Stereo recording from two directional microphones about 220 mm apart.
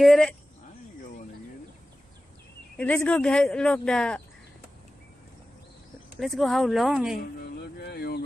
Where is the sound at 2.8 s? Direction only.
5° left (ahead or behind).